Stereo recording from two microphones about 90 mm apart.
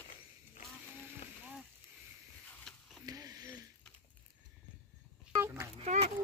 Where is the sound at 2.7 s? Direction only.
5° left (ahead or behind).